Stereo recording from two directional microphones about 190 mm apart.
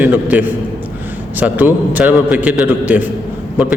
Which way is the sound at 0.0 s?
10° right (ahead or behind).